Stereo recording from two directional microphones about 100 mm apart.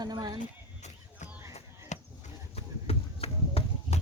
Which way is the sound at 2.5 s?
85° left.